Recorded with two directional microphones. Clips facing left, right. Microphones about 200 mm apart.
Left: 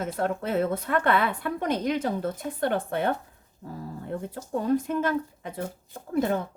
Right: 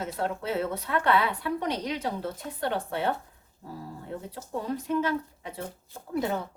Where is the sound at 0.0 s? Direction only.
50° left (ahead or behind).